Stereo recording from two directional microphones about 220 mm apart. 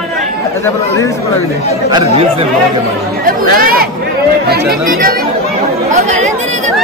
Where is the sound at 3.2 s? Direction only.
40° right (ahead or behind).